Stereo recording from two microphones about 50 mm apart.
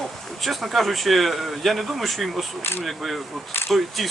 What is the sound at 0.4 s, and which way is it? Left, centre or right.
Speech, centre.